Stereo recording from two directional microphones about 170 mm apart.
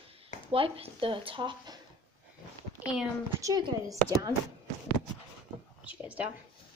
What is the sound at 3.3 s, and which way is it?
Speech, 20° right (ahead or behind).